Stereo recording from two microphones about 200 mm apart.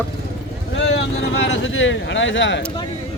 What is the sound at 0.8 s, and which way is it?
Speech, 70° left (ahead or behind).